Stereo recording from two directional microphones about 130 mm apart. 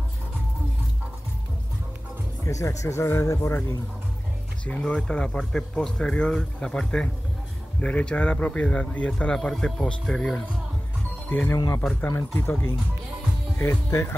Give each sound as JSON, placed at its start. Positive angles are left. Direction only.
{"t": 2.4, "sound": "speech", "side_deg": 25}
{"t": 4.6, "sound": "a man's voice", "side_deg": 10}
{"t": 11.2, "sound": "speech", "side_deg": 15}
{"t": 11.5, "sound": "speech", "side_deg": 30}
{"t": 11.8, "sound": "a man's voice", "side_deg": 5}
{"t": 12.1, "sound": "a man's voice", "side_deg": 15}
{"t": 13.6, "sound": "speech", "side_deg": 20}